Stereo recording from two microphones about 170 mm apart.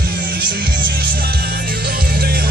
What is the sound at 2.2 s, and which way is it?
Music, 65° right (ahead or behind).